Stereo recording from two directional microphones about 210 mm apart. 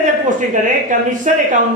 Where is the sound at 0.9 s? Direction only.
35° right (ahead or behind).